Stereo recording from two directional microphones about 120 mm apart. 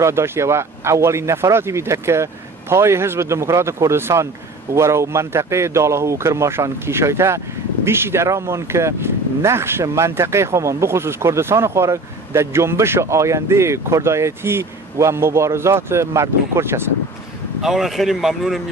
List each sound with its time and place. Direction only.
0.0 s speech: 20° right (ahead or behind)
17.6 s speech: 5° right (ahead or behind)